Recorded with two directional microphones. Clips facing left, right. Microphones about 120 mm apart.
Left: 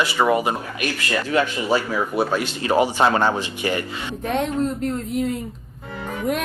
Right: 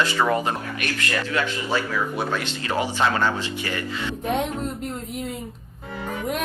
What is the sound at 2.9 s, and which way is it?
Speech, 30° left (ahead or behind).